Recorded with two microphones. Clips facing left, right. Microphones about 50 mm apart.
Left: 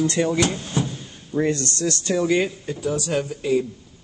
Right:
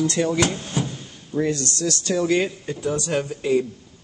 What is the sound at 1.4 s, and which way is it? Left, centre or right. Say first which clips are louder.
Speech: left 1 dB; left.